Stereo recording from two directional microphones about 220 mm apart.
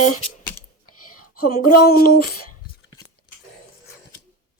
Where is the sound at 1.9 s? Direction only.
45° left (ahead or behind).